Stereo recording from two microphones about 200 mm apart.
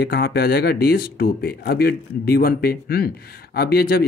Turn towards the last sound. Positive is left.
turn(degrees=50)  # may be behind; listen again after turning